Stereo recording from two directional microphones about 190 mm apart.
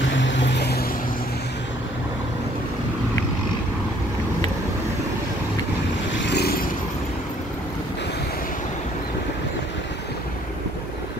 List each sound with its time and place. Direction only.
0.1 s vehicle: 75° left (ahead or behind)
6.1 s vehicle: 60° left (ahead or behind)